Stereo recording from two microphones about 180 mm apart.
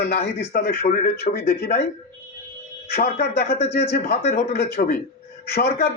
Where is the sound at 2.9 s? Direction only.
55° left (ahead or behind).